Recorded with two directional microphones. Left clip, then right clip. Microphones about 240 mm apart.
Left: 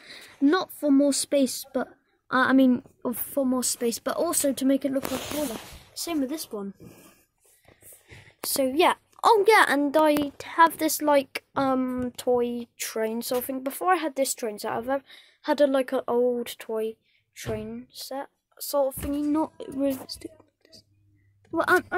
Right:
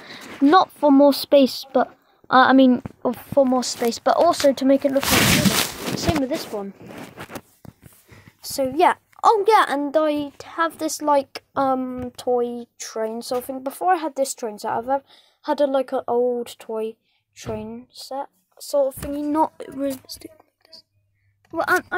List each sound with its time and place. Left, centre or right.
0.0 s speech: centre
5.9 s speech: centre
8.1 s a woman's voice: centre
19.1 s speech: right
21.5 s speech: centre